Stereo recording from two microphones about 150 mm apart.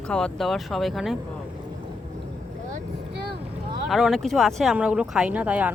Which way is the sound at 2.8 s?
90° right.